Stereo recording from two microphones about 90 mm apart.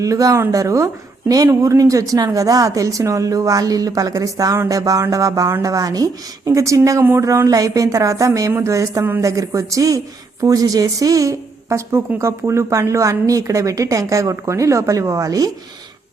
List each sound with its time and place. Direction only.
0.0 s a woman's voice: 40° right (ahead or behind)